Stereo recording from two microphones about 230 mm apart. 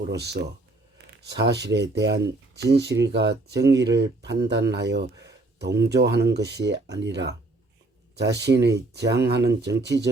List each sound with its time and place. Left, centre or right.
0.1 s speech: right